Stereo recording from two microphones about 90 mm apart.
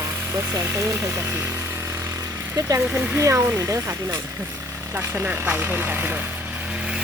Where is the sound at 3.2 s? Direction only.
30° right (ahead or behind).